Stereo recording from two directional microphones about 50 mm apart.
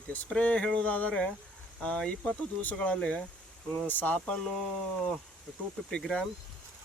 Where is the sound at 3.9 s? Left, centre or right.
Left.